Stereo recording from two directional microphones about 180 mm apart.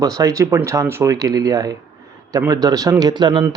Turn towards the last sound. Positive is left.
turn(degrees=-25)  # may be behind; listen again after turning